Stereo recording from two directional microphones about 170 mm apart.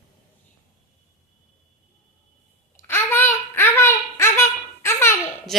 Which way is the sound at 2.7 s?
15° left (ahead or behind).